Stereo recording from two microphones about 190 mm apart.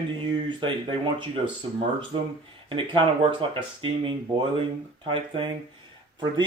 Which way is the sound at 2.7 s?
25° right (ahead or behind).